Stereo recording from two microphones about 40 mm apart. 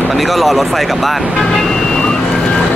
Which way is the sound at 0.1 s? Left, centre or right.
Centre.